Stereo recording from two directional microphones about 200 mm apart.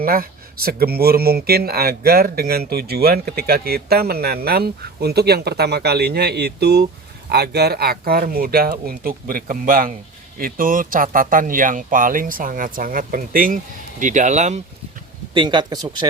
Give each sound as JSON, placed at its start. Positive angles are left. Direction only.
{"t": 0.0, "sound": "speech", "side_deg": -50}
{"t": 15.3, "sound": "speech", "side_deg": -25}